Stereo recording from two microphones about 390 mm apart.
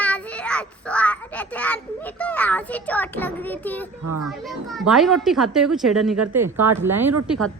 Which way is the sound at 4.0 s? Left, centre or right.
Right.